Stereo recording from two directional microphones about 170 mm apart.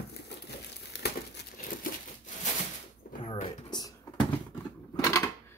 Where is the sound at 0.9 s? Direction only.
80° left.